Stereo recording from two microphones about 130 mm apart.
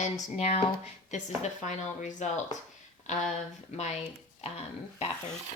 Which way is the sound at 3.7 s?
60° left (ahead or behind).